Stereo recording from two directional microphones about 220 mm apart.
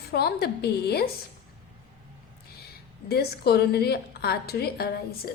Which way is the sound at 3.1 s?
45° left (ahead or behind).